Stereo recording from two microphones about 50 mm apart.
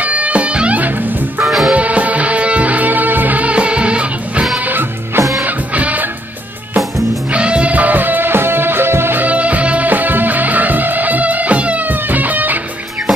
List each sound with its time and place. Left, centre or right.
0.0 s music: right
1.4 s music: centre
1.7 s music: right
4.6 s music: right
5.8 s music: right
7.3 s music: right
9.2 s music: right